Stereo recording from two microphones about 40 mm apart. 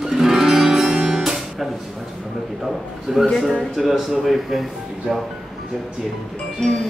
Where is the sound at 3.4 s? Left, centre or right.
Centre.